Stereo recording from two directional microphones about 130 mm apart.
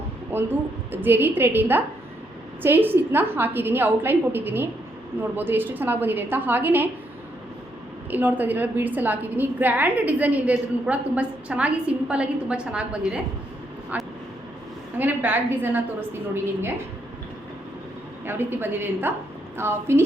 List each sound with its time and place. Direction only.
0.3 s a woman's voice: 15° right (ahead or behind)
8.1 s a woman's voice: 15° right (ahead or behind)
13.9 s vehicle: 10° right (ahead or behind)
14.9 s a woman's voice: 15° right (ahead or behind)
18.3 s a woman's voice: 15° right (ahead or behind)